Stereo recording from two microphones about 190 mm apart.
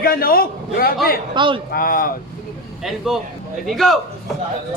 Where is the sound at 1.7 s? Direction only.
50° left (ahead or behind).